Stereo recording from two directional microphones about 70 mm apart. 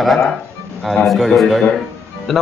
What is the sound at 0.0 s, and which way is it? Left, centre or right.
Speech, centre.